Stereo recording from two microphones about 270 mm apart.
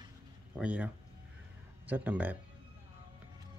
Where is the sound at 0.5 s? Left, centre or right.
Centre.